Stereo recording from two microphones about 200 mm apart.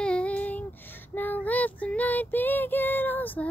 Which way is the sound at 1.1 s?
10° left (ahead or behind).